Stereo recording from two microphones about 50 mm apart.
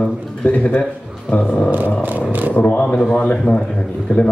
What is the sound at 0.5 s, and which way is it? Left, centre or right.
Speech, left.